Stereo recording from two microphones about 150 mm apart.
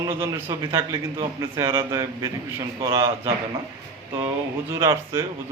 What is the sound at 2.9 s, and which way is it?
Speech, 35° right (ahead or behind).